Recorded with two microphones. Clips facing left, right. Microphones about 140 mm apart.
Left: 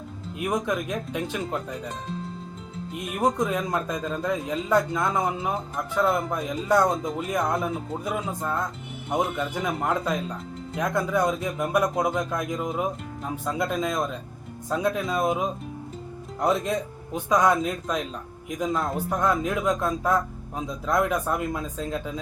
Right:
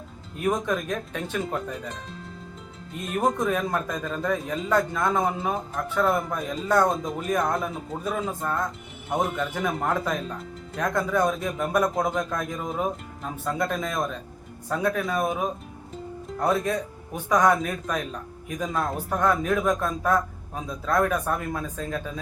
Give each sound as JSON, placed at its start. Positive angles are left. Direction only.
{"t": 0.3, "sound": "a man's voice", "side_deg": 10}
{"t": 3.0, "sound": "a man's voice", "side_deg": 15}